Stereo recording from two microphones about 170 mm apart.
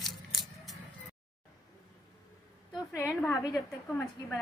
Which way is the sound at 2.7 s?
20° left (ahead or behind).